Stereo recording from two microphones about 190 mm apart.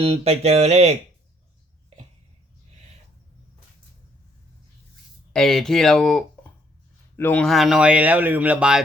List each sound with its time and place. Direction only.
0.0 s music: 30° right (ahead or behind)
5.3 s speech: centre (ahead or behind)